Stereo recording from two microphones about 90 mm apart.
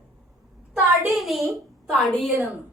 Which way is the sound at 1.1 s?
Centre (ahead or behind).